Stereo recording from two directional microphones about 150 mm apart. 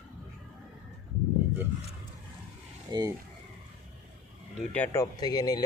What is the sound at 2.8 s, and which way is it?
Speech, 25° right (ahead or behind).